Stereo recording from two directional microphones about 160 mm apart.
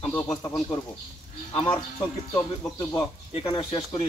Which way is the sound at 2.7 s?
25° left (ahead or behind).